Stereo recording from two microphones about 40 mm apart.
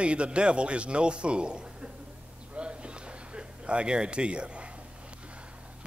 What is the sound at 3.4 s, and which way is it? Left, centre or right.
A man's voice, right.